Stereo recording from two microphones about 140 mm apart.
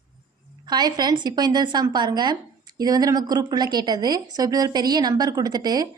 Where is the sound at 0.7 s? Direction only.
30° right (ahead or behind).